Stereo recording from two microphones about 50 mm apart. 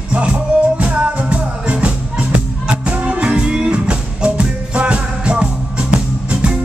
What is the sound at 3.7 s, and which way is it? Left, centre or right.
Music, right.